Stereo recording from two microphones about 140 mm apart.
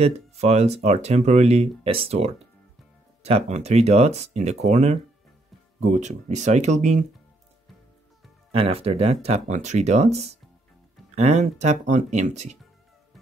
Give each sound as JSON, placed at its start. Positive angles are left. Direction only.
{"t": 0.0, "sound": "speech", "side_deg": -50}
{"t": 8.5, "sound": "speech", "side_deg": -45}